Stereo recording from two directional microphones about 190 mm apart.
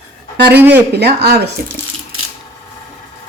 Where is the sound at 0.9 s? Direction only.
60° right (ahead or behind).